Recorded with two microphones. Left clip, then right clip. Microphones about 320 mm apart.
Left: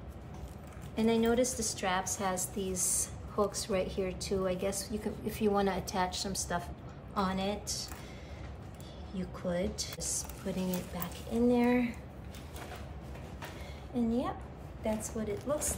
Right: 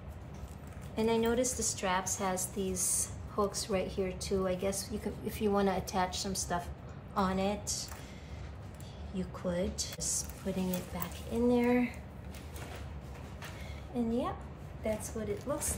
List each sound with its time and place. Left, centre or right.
0.9 s a woman's voice: centre
9.1 s a woman's voice: centre
13.9 s a woman's voice: centre